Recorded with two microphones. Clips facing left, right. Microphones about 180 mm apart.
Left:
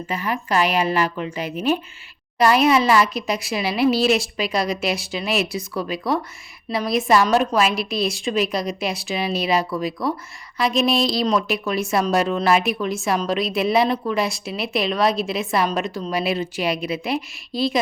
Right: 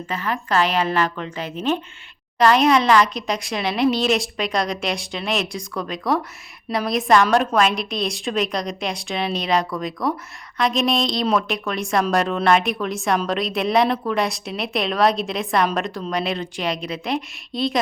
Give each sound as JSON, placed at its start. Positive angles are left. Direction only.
{"t": 0.1, "sound": "a woman's voice", "side_deg": 10}